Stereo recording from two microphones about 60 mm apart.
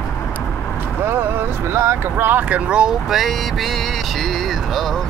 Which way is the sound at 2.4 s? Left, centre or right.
Right.